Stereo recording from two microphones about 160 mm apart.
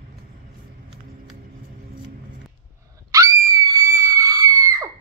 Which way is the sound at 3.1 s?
20° right (ahead or behind).